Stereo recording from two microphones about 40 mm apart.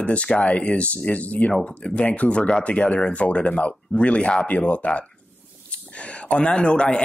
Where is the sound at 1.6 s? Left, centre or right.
Left.